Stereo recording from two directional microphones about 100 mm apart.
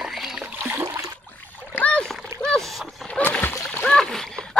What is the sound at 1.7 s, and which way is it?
Splash, 15° left (ahead or behind).